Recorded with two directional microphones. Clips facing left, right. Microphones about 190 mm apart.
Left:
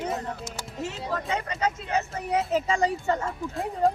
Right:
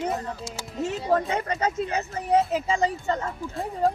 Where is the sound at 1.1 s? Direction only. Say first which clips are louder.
Right 10 dB; 55° right (ahead or behind).